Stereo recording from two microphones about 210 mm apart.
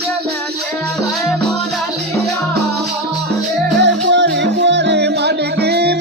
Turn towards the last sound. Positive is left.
turn(degrees=-50)  # may be behind; listen again after turning